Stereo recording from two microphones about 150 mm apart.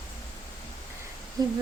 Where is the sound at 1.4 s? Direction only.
25° right (ahead or behind).